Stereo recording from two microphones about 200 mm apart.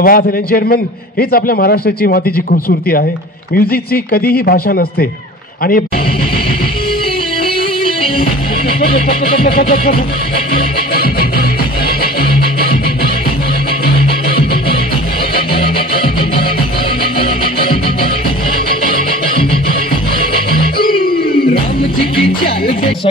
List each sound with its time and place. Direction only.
0.0 s a man's voice: 45° left (ahead or behind)
9.4 s a man's voice: 45° left (ahead or behind)
11.0 s music: 50° left (ahead or behind)
15.5 s music: 25° left (ahead or behind)
22.2 s music: 30° left (ahead or behind)